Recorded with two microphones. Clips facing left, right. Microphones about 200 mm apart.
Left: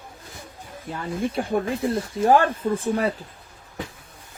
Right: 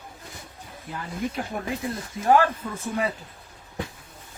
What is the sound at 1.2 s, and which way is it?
Speech, 30° left (ahead or behind).